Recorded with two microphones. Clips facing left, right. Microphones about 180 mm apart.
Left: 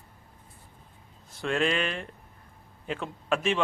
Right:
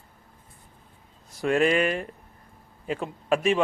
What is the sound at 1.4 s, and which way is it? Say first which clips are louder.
Speech: right 5 dB; 5° right (ahead or behind).